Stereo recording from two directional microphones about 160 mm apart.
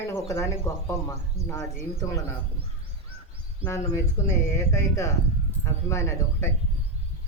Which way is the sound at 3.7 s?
20° left (ahead or behind).